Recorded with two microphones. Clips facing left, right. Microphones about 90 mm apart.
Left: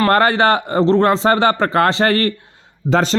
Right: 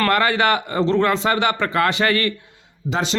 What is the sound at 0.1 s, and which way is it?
Speech, 35° left (ahead or behind).